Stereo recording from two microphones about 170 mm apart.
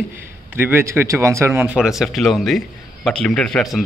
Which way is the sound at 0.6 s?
15° right (ahead or behind).